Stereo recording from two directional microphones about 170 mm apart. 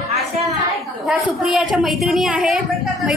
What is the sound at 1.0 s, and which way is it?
A woman's voice, centre (ahead or behind).